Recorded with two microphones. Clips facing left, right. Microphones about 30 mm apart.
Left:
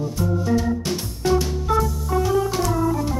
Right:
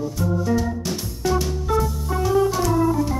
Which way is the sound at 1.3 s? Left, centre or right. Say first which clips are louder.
Left 2 dB; centre.